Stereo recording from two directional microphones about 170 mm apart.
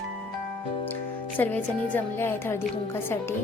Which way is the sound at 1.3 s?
10° left (ahead or behind).